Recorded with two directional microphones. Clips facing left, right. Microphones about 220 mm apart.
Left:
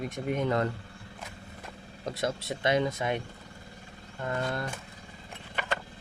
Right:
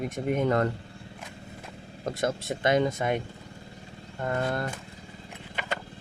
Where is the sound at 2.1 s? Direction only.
50° right (ahead or behind).